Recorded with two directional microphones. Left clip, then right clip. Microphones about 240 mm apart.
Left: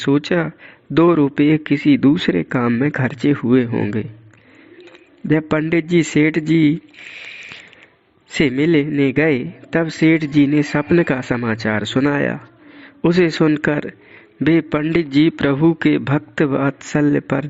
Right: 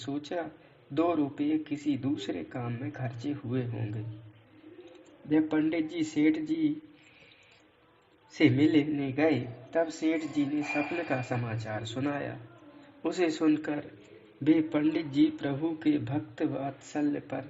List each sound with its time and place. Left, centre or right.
0.0 s a man's voice: left
5.3 s a man's voice: left
8.3 s a man's voice: left